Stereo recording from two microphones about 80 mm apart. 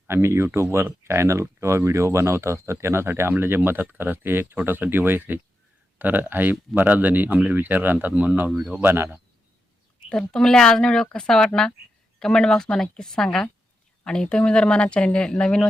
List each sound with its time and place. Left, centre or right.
0.1 s speech: right
10.1 s speech: centre